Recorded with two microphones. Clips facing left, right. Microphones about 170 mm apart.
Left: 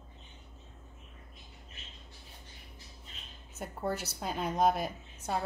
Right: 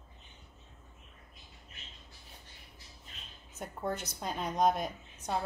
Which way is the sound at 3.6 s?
5° left (ahead or behind).